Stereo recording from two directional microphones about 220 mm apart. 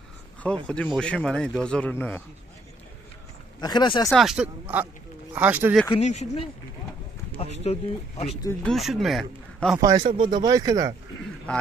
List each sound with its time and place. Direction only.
0.4 s a man's voice: 5° left (ahead or behind)
3.6 s speech: 20° left (ahead or behind)
4.1 s a man's voice: centre (ahead or behind)
5.9 s speech: 30° left (ahead or behind)
7.6 s speech: 30° left (ahead or behind)
8.5 s a man's voice: centre (ahead or behind)
9.8 s speech: 15° right (ahead or behind)